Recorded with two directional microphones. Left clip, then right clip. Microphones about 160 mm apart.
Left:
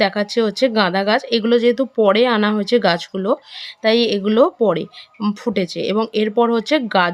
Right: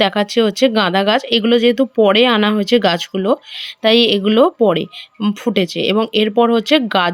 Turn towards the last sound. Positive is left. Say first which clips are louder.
# right 2 dB
turn(degrees=-10)  # may be behind; listen again after turning